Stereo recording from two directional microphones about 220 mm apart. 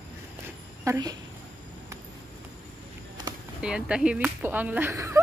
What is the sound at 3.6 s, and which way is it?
Speech, 5° right (ahead or behind).